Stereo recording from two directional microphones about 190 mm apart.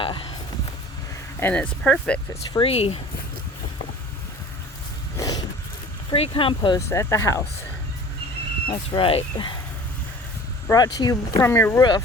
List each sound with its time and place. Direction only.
0.0 s a sound: 25° left (ahead or behind)
1.4 s speech: 10° left (ahead or behind)
2.5 s speech: 30° left (ahead or behind)
5.1 s a sound: 20° left (ahead or behind)
6.1 s speech: 30° left (ahead or behind)
9.0 s speech: 25° left (ahead or behind)
10.7 s speech: 20° left (ahead or behind)